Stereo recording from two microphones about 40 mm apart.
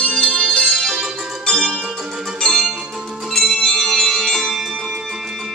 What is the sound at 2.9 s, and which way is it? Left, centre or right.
Music, centre.